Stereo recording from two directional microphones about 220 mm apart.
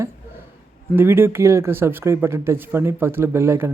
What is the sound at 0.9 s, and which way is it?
Speech, 10° right (ahead or behind).